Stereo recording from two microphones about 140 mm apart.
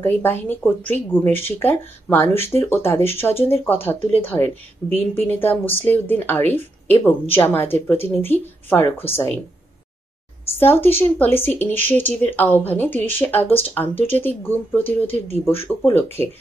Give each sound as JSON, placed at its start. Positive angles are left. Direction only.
{"t": 0.0, "sound": "speech", "side_deg": 15}
{"t": 10.4, "sound": "speech", "side_deg": 15}
{"t": 15.9, "sound": "speech", "side_deg": 15}